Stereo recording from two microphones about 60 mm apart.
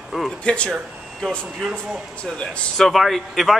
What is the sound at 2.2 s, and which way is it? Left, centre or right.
Speech, centre.